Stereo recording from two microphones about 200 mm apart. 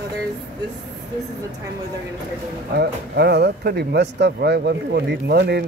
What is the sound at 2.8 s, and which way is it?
Speech, 55° right (ahead or behind).